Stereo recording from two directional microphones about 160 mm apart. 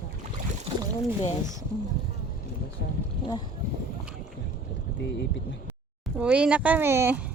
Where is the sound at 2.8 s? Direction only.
90° left.